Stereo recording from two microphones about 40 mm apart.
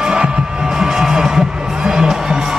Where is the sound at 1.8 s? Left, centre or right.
Centre.